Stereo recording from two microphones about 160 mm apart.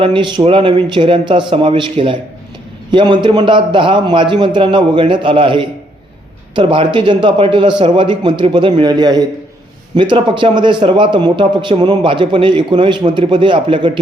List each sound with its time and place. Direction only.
0.0 s a man's voice: 30° right (ahead or behind)